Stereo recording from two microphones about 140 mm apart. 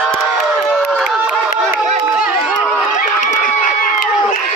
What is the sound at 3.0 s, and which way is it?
Crowd, 65° left (ahead or behind).